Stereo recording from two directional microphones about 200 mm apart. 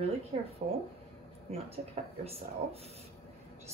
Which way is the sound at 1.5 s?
30° right (ahead or behind).